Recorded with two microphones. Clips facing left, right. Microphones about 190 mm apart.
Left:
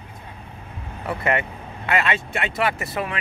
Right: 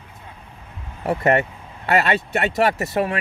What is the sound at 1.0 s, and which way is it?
Speech, 40° right (ahead or behind).